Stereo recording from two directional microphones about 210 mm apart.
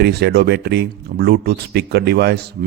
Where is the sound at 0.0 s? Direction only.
50° right (ahead or behind).